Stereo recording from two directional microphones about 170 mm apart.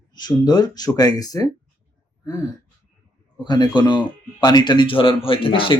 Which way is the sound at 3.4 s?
25° left (ahead or behind).